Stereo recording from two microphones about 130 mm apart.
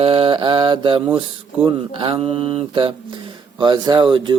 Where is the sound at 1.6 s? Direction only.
40° right (ahead or behind).